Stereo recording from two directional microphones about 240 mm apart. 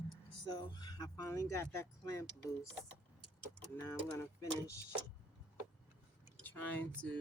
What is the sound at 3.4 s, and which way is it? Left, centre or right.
Vehicle, centre.